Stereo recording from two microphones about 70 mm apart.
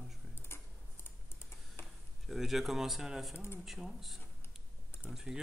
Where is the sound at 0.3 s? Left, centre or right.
Left.